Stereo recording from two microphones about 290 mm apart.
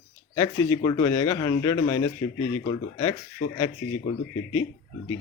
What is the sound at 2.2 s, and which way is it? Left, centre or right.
Speech, left.